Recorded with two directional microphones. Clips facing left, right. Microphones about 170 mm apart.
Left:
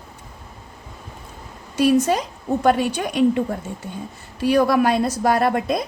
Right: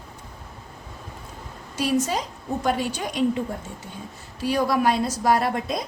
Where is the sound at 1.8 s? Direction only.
60° left (ahead or behind).